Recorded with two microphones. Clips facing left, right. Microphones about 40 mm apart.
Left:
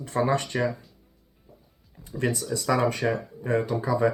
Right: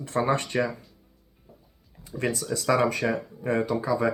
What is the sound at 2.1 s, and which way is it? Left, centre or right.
Speech, centre.